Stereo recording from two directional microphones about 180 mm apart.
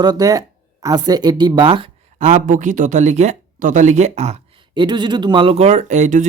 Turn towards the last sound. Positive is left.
turn(degrees=-40)  # may be behind; listen again after turning